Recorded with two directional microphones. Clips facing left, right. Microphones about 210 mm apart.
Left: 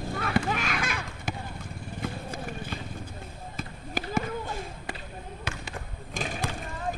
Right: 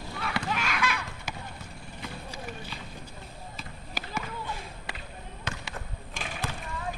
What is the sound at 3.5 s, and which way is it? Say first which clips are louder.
Basketball bounce: left 8 dB; 50° left (ahead or behind).